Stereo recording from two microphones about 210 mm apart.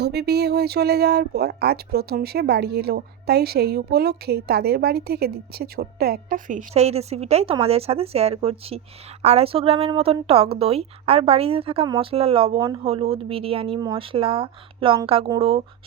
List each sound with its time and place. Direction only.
0.0 s a woman's voice: 50° right (ahead or behind); by 15.6 s 25° right (ahead or behind)